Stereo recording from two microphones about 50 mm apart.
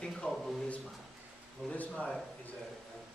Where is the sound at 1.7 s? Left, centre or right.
Left.